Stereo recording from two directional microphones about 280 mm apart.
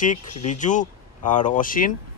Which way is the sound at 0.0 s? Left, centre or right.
Left.